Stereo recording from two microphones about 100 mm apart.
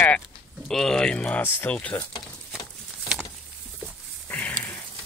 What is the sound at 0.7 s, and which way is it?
Speech, 5° left (ahead or behind).